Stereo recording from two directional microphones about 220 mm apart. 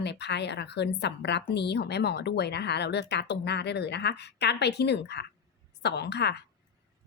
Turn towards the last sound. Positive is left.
turn(degrees=50)  # may be behind; listen again after turning